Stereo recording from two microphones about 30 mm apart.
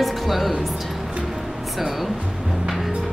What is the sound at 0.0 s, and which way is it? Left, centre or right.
Music, centre.